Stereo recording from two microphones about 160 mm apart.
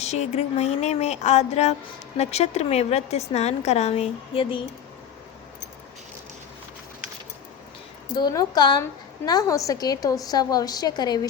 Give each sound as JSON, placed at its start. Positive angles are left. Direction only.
{"t": 0.0, "sound": "a woman's voice", "side_deg": 45}
{"t": 8.1, "sound": "a woman's voice", "side_deg": 25}